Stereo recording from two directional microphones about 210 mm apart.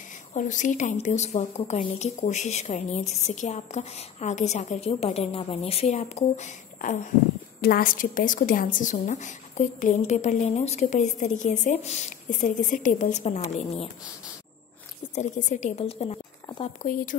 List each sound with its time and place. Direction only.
0.3 s a woman's voice: 35° left (ahead or behind)
15.1 s a woman's voice: 35° left (ahead or behind)
16.8 s a woman's voice: 40° left (ahead or behind)